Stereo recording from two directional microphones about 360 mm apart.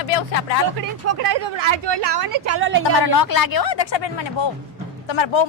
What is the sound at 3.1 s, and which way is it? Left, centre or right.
Speech, left.